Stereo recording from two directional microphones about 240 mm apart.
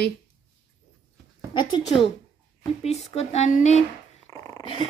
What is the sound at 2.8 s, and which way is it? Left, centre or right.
Speech, left.